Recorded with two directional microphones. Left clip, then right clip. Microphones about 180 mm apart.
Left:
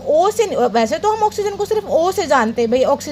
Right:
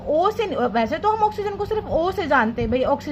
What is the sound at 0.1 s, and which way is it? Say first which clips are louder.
A woman's voice: left 6 dB; 30° left (ahead or behind).